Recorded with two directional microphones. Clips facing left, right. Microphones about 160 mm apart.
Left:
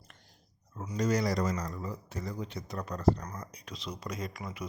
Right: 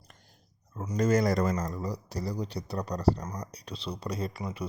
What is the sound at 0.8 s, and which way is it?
Speech, 50° right (ahead or behind).